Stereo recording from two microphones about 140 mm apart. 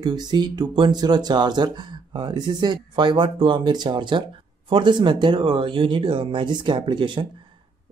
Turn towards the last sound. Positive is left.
turn(degrees=-35)  # may be behind; listen again after turning